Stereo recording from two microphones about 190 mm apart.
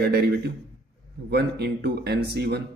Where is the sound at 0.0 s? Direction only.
60° right (ahead or behind).